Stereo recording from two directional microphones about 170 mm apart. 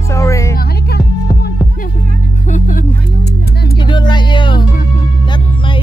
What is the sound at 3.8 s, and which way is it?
Music, 25° left (ahead or behind).